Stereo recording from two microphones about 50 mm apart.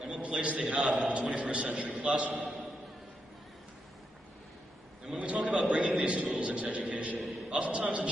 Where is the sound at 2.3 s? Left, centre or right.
Centre.